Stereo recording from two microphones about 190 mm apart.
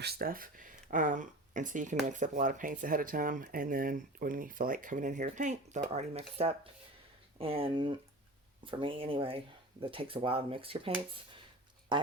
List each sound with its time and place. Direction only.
0.0 s speech: 55° right (ahead or behind); by 12.1 s 25° right (ahead or behind)